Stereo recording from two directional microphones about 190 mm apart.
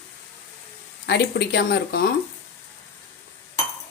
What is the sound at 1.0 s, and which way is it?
Speech, 60° left (ahead or behind).